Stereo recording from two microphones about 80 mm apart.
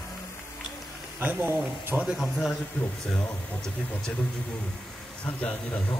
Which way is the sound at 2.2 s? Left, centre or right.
Centre.